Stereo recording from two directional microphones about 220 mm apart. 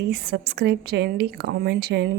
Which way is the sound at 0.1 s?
45° right (ahead or behind).